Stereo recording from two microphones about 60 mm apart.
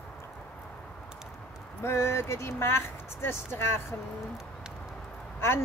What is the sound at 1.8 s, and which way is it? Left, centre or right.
Speech, left.